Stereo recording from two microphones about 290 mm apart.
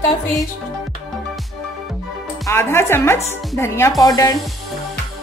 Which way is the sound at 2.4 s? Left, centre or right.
Centre.